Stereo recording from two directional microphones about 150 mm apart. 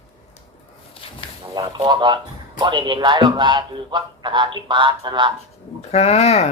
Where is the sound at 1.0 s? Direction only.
35° left (ahead or behind).